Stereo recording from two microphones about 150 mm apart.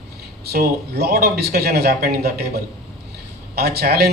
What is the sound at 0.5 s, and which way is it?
A man's voice, 90° right.